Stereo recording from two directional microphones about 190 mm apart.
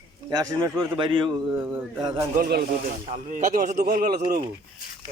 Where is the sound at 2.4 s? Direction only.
50° right (ahead or behind).